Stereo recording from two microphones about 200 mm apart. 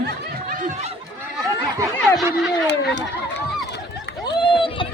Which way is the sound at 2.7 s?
60° left (ahead or behind).